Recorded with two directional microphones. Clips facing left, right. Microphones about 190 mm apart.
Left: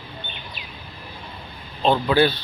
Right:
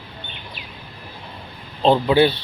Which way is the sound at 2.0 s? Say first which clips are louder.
Right 1 dB; 25° right (ahead or behind).